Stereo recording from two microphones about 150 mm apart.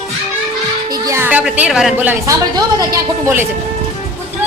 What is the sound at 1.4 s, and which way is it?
Speech, 5° right (ahead or behind).